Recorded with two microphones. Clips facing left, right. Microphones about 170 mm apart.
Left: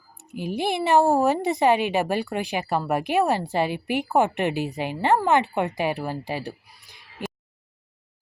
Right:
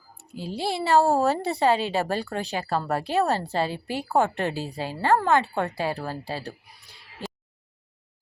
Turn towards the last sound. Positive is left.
turn(degrees=15)  # may be behind; listen again after turning